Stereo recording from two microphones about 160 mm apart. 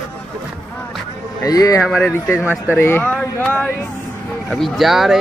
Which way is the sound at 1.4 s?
20° left (ahead or behind).